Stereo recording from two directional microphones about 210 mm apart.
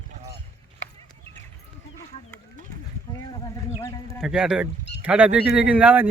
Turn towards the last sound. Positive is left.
turn(degrees=-5)  # may be behind; listen again after turning